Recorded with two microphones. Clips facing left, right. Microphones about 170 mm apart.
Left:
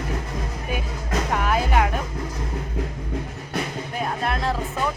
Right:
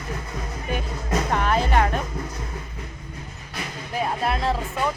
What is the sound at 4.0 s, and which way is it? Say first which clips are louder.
Speech: right 2 dB; centre (ahead or behind).